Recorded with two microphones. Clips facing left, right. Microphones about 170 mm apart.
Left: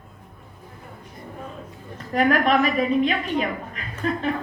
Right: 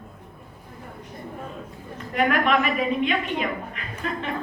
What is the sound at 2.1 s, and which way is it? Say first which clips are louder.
A man's voice: left 2 dB; 35° left (ahead or behind).